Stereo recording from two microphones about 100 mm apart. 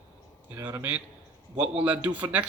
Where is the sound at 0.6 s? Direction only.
30° right (ahead or behind).